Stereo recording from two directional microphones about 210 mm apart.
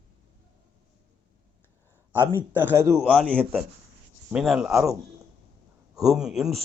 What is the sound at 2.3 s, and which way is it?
A man's voice, 10° right (ahead or behind).